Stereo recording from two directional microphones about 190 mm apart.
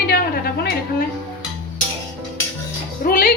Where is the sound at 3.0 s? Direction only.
50° left (ahead or behind).